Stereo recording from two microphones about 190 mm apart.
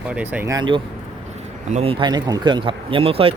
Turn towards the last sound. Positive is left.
turn(degrees=-30)  # may be behind; listen again after turning